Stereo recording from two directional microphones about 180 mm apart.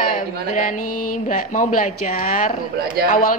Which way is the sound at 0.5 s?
45° left (ahead or behind).